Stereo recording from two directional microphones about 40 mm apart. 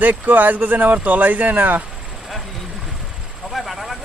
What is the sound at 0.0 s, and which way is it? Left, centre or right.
Speech, right.